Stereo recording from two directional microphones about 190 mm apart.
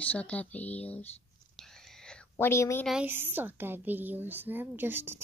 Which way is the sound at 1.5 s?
Centre (ahead or behind).